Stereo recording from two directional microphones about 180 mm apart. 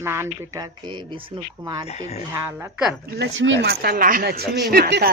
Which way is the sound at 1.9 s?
35° left (ahead or behind).